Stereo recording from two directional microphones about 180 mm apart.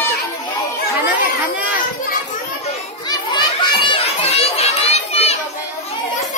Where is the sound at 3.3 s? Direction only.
25° left (ahead or behind).